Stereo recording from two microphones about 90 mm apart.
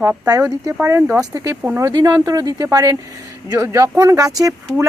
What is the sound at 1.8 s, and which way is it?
Speech, 45° right (ahead or behind).